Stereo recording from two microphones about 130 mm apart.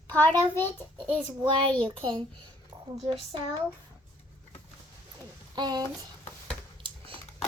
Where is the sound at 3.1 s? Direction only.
40° right (ahead or behind).